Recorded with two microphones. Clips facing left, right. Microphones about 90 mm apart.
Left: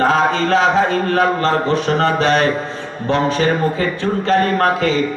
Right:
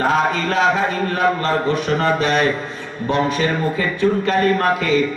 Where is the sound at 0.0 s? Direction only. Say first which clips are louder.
Left 3 dB; 30° left (ahead or behind).